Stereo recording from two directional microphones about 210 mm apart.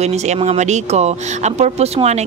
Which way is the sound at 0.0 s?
30° right (ahead or behind).